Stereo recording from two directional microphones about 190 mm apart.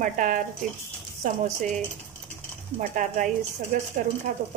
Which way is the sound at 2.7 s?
45° right (ahead or behind).